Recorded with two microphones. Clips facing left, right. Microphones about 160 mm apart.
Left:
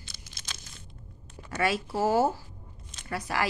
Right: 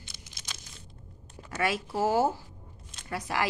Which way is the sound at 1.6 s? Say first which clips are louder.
Left 1 dB; 15° right (ahead or behind).